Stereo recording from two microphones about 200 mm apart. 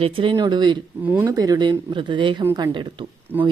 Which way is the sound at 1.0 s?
10° right (ahead or behind).